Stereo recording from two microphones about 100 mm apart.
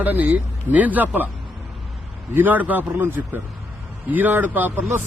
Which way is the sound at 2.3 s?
20° right (ahead or behind).